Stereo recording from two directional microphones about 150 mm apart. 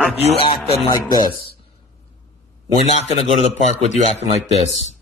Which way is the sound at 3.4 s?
45° left (ahead or behind).